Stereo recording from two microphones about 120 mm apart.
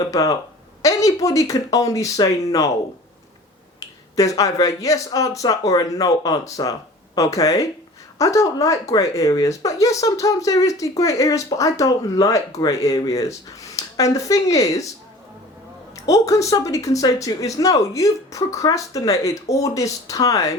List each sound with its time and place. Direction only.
0.0 s speech: 30° left (ahead or behind)
3.8 s speech: 30° left (ahead or behind)
16.0 s speech: 25° left (ahead or behind)